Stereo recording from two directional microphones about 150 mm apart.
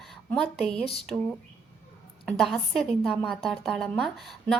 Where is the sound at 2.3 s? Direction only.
Centre (ahead or behind).